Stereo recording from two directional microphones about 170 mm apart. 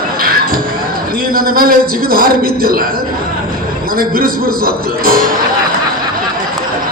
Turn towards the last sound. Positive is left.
turn(degrees=-60)  # may be behind; listen again after turning